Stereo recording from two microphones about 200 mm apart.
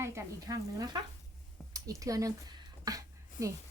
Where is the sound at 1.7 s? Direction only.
15° right (ahead or behind).